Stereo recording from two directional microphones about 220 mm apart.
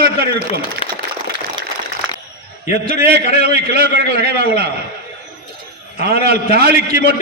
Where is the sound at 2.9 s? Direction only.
45° right (ahead or behind).